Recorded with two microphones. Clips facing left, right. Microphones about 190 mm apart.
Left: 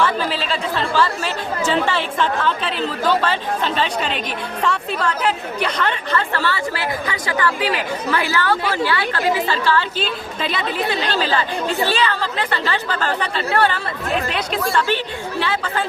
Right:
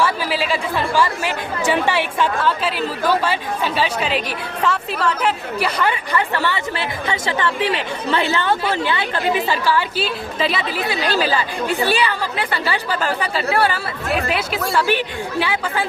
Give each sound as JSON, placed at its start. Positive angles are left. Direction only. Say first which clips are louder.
{"t": 0.0, "sound": "a woman's voice", "louder": "even", "side_deg": -10}